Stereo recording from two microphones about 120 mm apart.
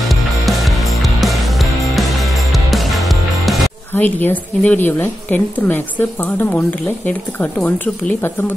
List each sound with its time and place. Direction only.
0.1 s music: centre (ahead or behind)
3.9 s a woman's voice: 15° left (ahead or behind)